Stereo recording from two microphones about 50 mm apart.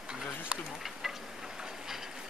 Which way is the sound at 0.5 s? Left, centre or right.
Right.